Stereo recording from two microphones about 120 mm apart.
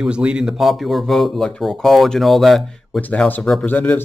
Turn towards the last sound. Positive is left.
turn(degrees=15)  # may be behind; listen again after turning